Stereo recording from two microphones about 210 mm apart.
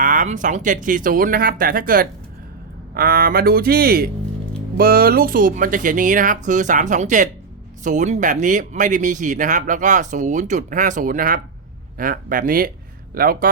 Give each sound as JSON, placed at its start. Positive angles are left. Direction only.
{"t": 0.0, "sound": "speech", "side_deg": -40}